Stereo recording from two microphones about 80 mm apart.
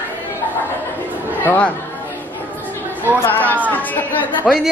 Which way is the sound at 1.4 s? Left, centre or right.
Centre.